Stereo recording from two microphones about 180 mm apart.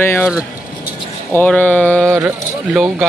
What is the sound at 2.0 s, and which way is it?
Speech, 15° right (ahead or behind).